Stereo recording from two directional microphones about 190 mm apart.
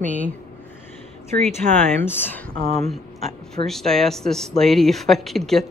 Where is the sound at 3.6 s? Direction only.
Centre (ahead or behind).